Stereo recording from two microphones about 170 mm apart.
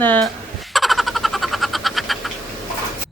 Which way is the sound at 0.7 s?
Centre (ahead or behind).